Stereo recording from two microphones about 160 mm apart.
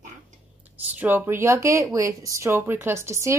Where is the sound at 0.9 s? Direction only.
15° right (ahead or behind).